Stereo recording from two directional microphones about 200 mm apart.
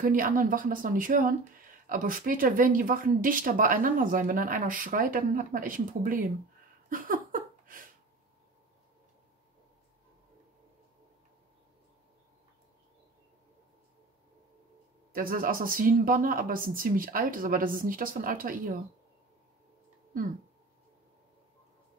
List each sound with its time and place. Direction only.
0.0 s speech: 45° right (ahead or behind)
6.9 s a sound: 45° right (ahead or behind)
15.1 s speech: 45° right (ahead or behind)